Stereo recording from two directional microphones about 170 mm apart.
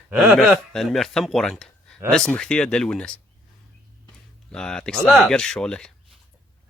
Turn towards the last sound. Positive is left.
turn(degrees=5)  # may be behind; listen again after turning